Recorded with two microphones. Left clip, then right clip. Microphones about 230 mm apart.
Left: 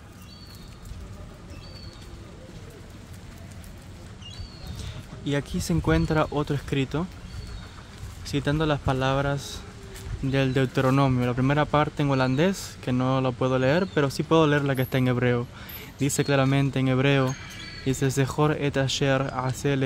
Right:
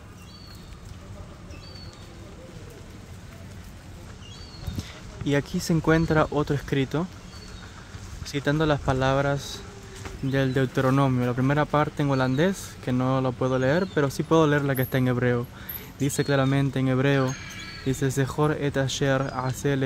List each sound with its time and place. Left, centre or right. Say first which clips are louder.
4.7 s speech: right 2 dB; centre
8.3 s speech: right 1 dB; centre